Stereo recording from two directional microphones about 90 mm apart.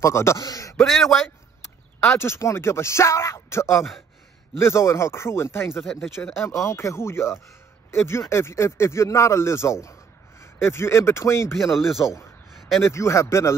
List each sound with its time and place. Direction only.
0.0 s speech: 30° left (ahead or behind)
0.4 s a man's voice: 45° left (ahead or behind)
0.7 s a man's voice: centre (ahead or behind)
2.1 s speech: 30° left (ahead or behind)
11.7 s a man's voice: centre (ahead or behind)
12.8 s speech: 30° left (ahead or behind)